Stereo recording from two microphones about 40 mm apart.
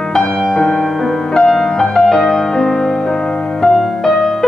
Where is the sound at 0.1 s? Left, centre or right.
Centre.